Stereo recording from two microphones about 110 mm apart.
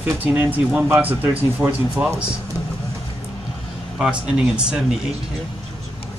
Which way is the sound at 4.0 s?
10° right (ahead or behind).